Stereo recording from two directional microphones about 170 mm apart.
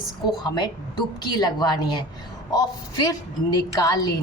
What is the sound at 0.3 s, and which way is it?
A woman's voice, 25° left (ahead or behind).